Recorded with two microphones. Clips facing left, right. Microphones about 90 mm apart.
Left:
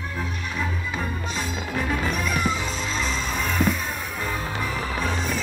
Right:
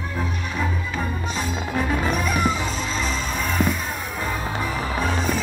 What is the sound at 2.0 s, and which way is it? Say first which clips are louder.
Music: right 3 dB; 5° right (ahead or behind).